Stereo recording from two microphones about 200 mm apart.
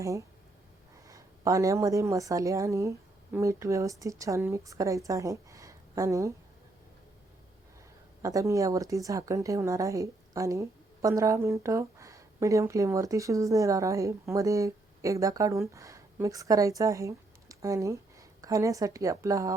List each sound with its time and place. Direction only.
0.0 s a woman's voice: 15° right (ahead or behind)
8.2 s a woman's voice: 15° right (ahead or behind)